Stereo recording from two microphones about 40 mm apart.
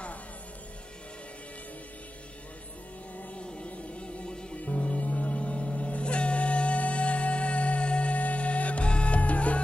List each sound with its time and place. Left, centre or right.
3.3 s music: left
4.6 s music: left